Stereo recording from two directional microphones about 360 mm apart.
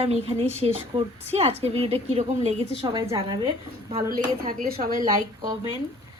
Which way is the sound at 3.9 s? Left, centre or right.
Right.